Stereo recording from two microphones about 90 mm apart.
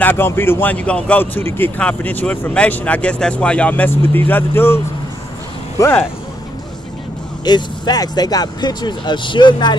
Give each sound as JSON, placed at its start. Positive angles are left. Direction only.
{"t": 0.0, "sound": "speech", "side_deg": 25}
{"t": 7.4, "sound": "speech", "side_deg": 50}